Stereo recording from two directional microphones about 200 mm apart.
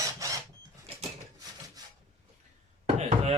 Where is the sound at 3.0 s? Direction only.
35° right (ahead or behind).